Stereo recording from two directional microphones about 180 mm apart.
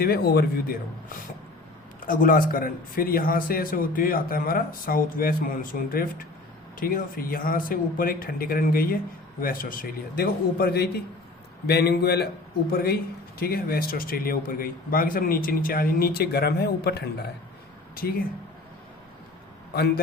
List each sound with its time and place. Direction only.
0.0 s a man's voice: 60° left (ahead or behind)